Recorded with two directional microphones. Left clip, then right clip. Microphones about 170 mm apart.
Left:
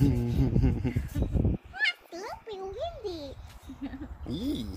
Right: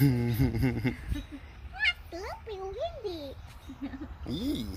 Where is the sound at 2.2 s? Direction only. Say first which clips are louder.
Left 1 dB; 15° left (ahead or behind).